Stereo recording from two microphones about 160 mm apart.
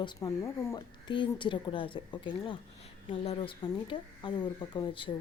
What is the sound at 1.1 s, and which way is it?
A woman's voice, 30° left (ahead or behind).